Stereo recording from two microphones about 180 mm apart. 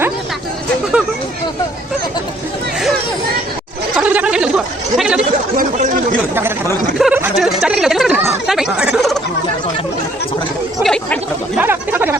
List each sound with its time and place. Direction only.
3.9 s chatter: 10° right (ahead or behind)
5.5 s chatter: 50° right (ahead or behind)
7.0 s a sound: 5° right (ahead or behind)
8.4 s chatter: 5° right (ahead or behind)
10.8 s chatter: 5° left (ahead or behind)
11.6 s a sound: 10° right (ahead or behind)